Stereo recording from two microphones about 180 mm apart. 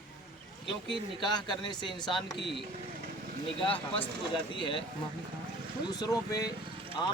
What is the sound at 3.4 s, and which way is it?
Speech, 30° left (ahead or behind).